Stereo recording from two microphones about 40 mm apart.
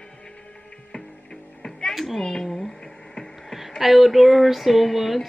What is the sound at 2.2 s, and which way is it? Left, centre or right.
Speech, centre.